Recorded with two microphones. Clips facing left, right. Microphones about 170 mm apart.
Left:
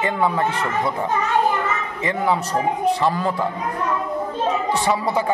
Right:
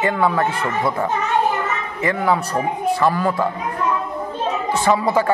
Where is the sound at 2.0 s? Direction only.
20° left (ahead or behind).